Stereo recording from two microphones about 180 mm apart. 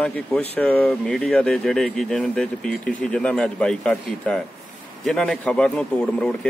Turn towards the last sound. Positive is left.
turn(degrees=5)  # may be behind; listen again after turning